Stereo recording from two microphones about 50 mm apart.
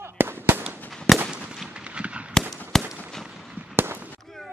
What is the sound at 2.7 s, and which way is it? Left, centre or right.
Fireworks, centre.